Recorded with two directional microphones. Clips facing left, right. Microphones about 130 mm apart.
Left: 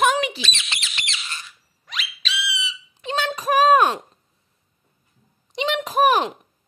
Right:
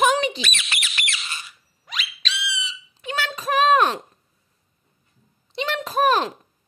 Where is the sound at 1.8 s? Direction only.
Centre (ahead or behind).